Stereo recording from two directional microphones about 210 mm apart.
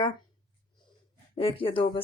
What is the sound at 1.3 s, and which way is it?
Speech, 25° left (ahead or behind).